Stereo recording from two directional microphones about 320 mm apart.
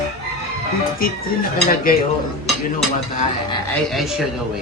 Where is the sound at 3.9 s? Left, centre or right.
Centre.